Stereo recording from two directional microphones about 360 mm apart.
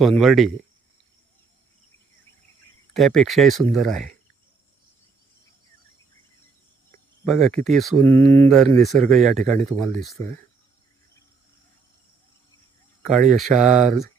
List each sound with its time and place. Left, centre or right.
0.0 s speech: centre
2.9 s speech: centre
6.9 s speech: centre
13.5 s speech: centre